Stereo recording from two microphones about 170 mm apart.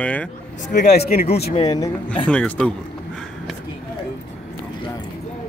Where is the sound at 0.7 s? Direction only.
60° left (ahead or behind).